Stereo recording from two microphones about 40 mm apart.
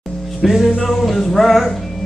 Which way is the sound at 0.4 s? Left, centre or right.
Centre.